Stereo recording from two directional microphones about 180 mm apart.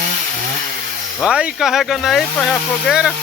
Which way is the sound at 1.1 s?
5° right (ahead or behind).